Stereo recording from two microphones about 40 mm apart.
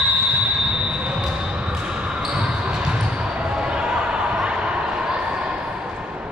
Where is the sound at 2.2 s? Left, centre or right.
Right.